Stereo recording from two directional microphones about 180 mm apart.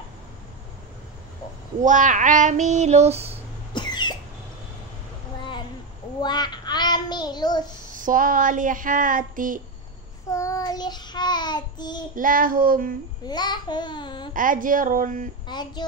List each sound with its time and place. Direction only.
1.8 s child singing: 45° right (ahead or behind)
3.7 s cough: 25° left (ahead or behind)
6.2 s child singing: 25° left (ahead or behind)
7.9 s speech: 50° right (ahead or behind)
10.3 s child singing: 20° left (ahead or behind)
12.2 s speech: 50° right (ahead or behind)
13.3 s babbling: 25° left (ahead or behind)
14.3 s speech: 50° right (ahead or behind)
15.4 s speech: 25° left (ahead or behind)